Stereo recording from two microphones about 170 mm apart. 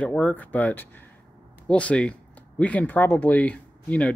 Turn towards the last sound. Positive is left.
turn(degrees=5)  # may be behind; listen again after turning